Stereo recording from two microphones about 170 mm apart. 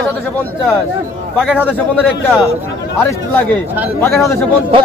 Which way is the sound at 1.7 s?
10° left (ahead or behind).